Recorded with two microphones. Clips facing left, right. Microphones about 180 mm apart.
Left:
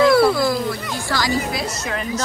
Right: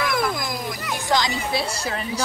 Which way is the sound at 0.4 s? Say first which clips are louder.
Left 9 dB; 15° right (ahead or behind).